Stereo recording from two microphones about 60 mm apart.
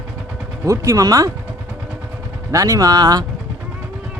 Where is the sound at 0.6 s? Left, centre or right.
Right.